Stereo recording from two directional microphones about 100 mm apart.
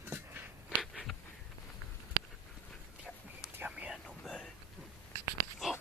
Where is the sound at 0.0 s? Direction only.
20° right (ahead or behind).